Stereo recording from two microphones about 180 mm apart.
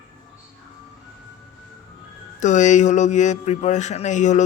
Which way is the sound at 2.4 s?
40° left (ahead or behind).